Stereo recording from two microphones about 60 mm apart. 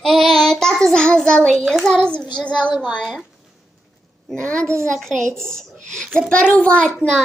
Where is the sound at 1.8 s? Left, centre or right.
Centre.